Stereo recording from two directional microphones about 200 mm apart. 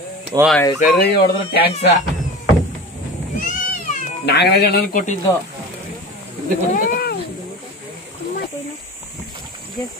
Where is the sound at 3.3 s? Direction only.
40° left (ahead or behind).